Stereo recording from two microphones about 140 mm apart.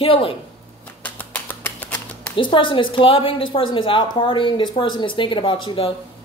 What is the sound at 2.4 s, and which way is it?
Speech, 35° left (ahead or behind).